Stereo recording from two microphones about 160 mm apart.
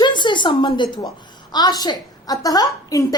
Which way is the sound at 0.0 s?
30° left (ahead or behind).